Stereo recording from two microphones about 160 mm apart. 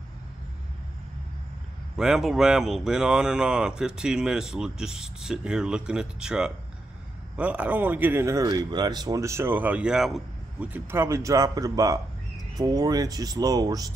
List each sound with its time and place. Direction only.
2.0 s speech: centre (ahead or behind); by 13.8 s 25° right (ahead or behind)